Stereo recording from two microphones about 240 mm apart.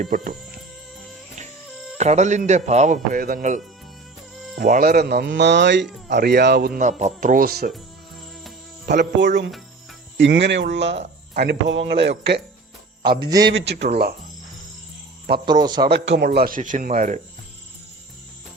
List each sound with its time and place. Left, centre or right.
0.0 s speech: right
1.7 s music: centre
2.0 s speech: right
8.9 s speech: right
13.5 s speech: right
15.4 s a man's voice: centre
15.8 s speech: right